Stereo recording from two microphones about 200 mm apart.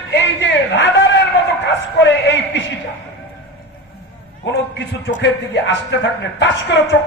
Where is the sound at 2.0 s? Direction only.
65° left (ahead or behind).